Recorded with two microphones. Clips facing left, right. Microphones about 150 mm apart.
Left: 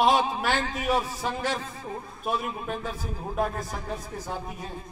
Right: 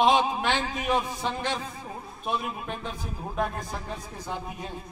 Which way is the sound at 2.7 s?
5° left (ahead or behind).